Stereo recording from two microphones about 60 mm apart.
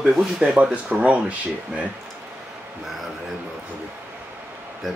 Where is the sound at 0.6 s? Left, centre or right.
Right.